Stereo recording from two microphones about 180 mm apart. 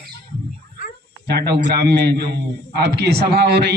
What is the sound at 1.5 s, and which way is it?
A man's voice, 65° right (ahead or behind).